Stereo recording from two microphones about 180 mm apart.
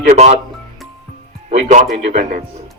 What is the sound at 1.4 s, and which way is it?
Speech, 40° right (ahead or behind).